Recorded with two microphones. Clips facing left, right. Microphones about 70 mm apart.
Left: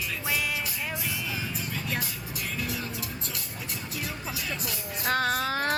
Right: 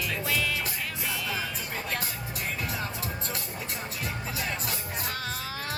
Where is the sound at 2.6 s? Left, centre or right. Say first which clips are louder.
Left 2 dB; right.